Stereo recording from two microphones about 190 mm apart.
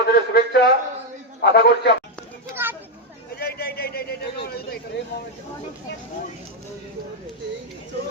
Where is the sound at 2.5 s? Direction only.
10° right (ahead or behind).